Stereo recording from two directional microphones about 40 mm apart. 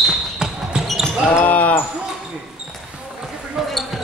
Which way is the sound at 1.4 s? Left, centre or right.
Left.